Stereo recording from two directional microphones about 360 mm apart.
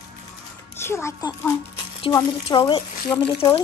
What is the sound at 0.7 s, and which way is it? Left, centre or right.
Speech, centre.